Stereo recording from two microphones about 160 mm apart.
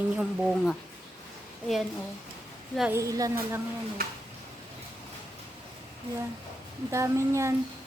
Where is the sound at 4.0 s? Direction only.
65° right (ahead or behind).